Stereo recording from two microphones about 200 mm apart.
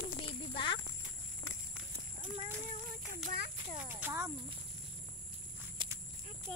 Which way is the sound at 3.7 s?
10° right (ahead or behind).